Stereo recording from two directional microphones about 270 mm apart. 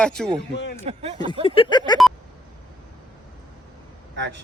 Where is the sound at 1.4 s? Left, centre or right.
Centre.